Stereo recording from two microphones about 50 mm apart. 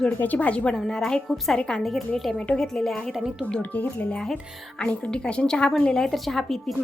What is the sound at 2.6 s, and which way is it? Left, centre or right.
Speech, centre.